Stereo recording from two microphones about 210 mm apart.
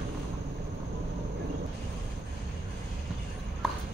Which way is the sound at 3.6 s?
Centre (ahead or behind).